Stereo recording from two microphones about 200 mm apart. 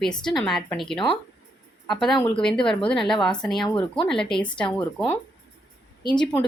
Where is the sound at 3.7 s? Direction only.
25° left (ahead or behind).